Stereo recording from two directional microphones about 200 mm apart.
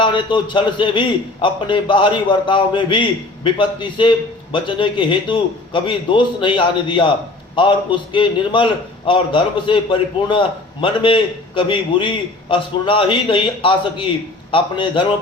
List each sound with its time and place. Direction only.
0.0 s a man's voice: 25° left (ahead or behind)